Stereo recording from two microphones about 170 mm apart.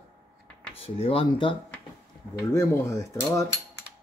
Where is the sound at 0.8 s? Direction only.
35° left (ahead or behind).